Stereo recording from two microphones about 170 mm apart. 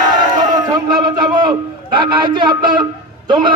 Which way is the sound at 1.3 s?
25° right (ahead or behind).